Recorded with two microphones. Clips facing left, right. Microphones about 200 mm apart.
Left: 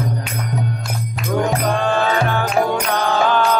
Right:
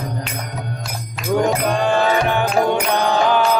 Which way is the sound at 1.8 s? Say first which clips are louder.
Right 3 dB; 15° right (ahead or behind).